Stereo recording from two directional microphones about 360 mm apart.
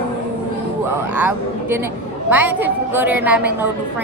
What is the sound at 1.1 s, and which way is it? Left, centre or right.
A woman's voice, centre.